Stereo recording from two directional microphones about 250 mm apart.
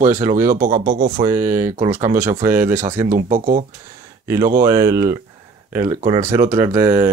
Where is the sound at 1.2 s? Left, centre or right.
Centre.